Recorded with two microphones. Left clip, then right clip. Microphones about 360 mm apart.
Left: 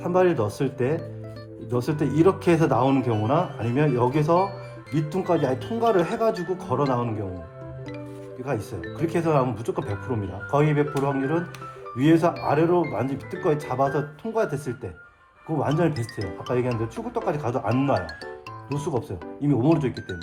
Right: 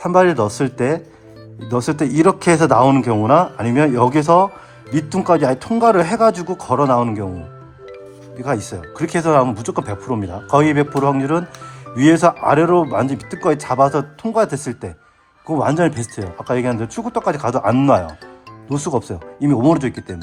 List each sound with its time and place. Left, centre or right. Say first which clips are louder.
0.0 s speech: right 8 dB; right
8.4 s speech: right 8 dB; right